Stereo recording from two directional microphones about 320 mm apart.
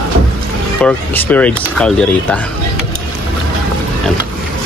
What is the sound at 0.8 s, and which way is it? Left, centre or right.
Speech, centre.